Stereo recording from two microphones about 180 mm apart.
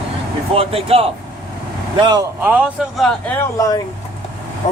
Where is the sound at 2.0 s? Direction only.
20° right (ahead or behind).